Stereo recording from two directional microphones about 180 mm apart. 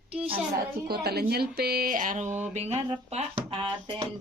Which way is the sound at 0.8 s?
60° right (ahead or behind).